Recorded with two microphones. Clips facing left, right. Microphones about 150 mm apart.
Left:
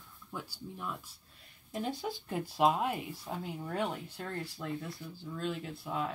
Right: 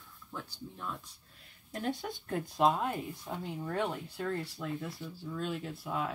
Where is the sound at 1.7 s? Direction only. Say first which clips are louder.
Even; centre (ahead or behind).